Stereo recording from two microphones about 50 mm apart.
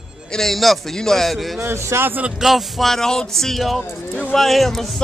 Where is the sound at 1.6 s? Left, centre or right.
Right.